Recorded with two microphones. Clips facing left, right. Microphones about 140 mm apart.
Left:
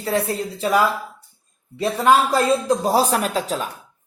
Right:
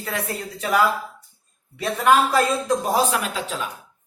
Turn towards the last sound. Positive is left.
turn(degrees=40)  # may be behind; listen again after turning